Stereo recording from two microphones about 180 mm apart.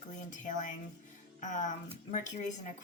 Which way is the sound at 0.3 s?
45° left (ahead or behind).